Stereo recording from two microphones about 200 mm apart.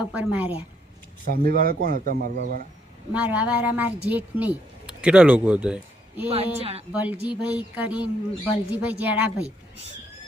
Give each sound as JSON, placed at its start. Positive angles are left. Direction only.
{"t": 0.0, "sound": "speech", "side_deg": -5}
{"t": 1.3, "sound": "a man's voice", "side_deg": -45}
{"t": 3.1, "sound": "speech", "side_deg": -5}
{"t": 6.3, "sound": "speech", "side_deg": -30}
{"t": 6.9, "sound": "speech", "side_deg": -5}